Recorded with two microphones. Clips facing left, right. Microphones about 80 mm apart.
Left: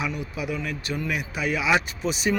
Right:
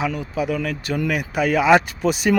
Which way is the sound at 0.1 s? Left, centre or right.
Right.